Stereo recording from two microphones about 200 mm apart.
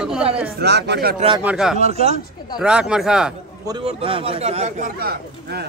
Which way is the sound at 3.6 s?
25° right (ahead or behind).